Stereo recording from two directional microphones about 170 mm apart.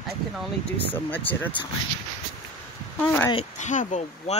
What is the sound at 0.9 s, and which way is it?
Speech, 10° left (ahead or behind).